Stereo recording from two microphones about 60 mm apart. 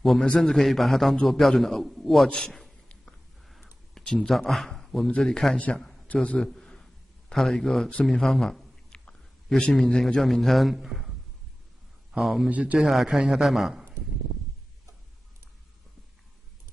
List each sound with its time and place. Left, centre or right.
0.4 s a man's voice: centre
2.2 s a man's voice: centre
3.9 s a man's voice: centre
6.2 s a man's voice: left
6.5 s a sound: centre
9.6 s a man's voice: centre
12.2 s a man's voice: centre
12.4 s a man's voice: right
12.7 s a man's voice: centre